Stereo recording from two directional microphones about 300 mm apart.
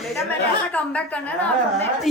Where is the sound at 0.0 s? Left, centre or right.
Centre.